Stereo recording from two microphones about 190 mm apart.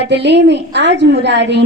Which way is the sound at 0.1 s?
65° right (ahead or behind).